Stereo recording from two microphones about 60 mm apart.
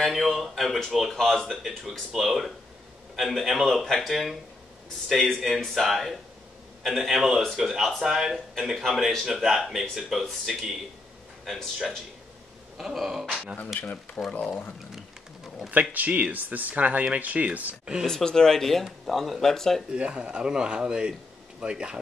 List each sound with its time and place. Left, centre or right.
0.0 s speech: centre
3.8 s speech: centre
4.1 s speech: centre
12.7 s speech: centre
13.7 s speech: left
15.7 s speech: right
18.0 s speech: centre
19.9 s speech: centre